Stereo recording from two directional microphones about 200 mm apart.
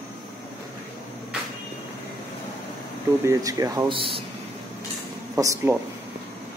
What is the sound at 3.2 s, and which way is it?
Speech, 15° right (ahead or behind).